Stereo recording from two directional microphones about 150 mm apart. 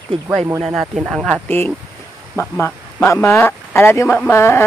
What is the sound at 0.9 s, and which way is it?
Speech, centre (ahead or behind).